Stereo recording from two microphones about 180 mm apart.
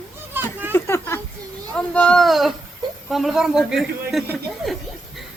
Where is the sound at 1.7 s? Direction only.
5° left (ahead or behind).